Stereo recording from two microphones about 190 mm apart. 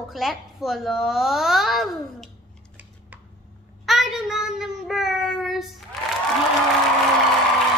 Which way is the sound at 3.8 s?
Centre (ahead or behind).